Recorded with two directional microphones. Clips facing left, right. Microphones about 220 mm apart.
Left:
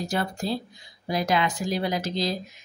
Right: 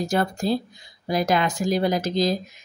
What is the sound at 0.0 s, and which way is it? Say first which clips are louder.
A woman's voice: right 5 dB; 45° right (ahead or behind).